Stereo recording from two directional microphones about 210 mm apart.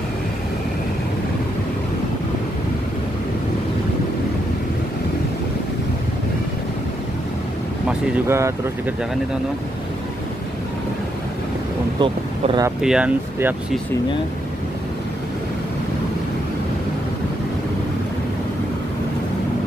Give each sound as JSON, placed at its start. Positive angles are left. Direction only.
{"t": 8.3, "sound": "speech", "side_deg": -15}
{"t": 12.0, "sound": "speech", "side_deg": -20}
{"t": 12.8, "sound": "speech", "side_deg": -5}